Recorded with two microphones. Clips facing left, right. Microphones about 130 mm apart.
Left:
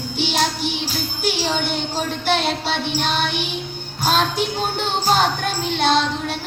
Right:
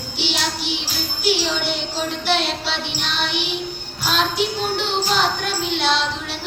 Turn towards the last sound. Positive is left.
turn(degrees=50)  # may be behind; listen again after turning